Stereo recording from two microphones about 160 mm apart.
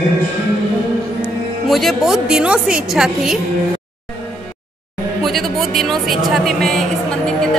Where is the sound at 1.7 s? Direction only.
Centre (ahead or behind).